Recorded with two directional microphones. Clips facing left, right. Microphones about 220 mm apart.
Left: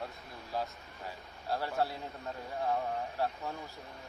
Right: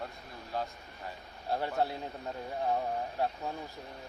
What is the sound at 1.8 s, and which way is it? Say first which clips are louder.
A man's voice: right 2 dB; 20° right (ahead or behind).